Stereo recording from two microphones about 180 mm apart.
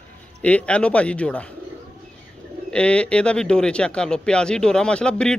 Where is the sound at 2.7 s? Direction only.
5° left (ahead or behind).